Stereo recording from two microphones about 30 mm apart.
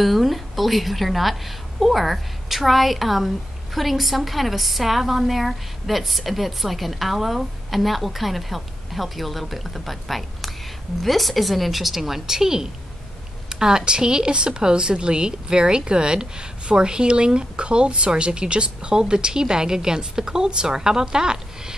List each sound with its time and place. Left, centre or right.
0.0 s a woman's voice: centre; by 21.7 s right